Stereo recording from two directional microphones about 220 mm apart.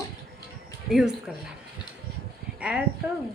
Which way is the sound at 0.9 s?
Centre (ahead or behind).